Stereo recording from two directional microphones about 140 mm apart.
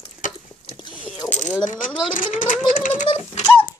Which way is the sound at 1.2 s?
30° left (ahead or behind).